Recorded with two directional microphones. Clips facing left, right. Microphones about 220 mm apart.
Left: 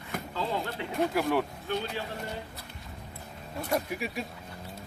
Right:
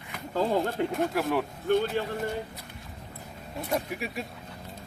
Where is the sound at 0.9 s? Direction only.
Centre (ahead or behind).